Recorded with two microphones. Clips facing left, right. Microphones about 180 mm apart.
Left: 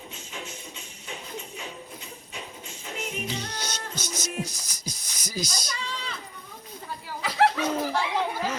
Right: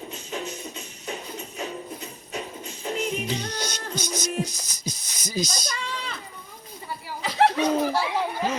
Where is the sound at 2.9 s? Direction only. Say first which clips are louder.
Right 8 dB; 40° right (ahead or behind).